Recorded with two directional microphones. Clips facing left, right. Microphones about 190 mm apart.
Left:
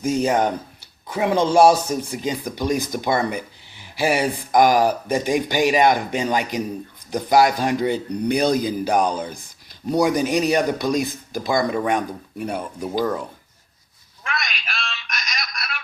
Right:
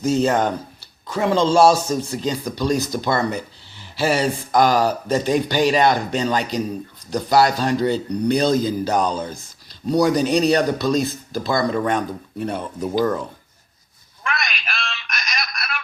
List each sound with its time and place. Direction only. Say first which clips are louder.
0.2 s speech: right 1 dB; 10° left (ahead or behind)
14.3 s telephone: right 2 dB; 60° right (ahead or behind)